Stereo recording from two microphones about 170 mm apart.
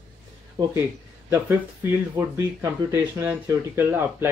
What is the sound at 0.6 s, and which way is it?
Speech, 25° right (ahead or behind).